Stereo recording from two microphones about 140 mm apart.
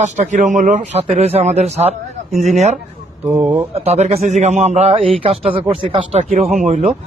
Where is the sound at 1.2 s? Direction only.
50° right (ahead or behind).